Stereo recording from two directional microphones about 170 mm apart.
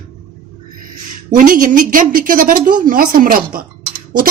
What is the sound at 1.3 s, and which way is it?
A woman's voice, 50° right (ahead or behind).